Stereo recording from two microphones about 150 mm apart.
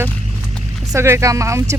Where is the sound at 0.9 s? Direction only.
20° right (ahead or behind).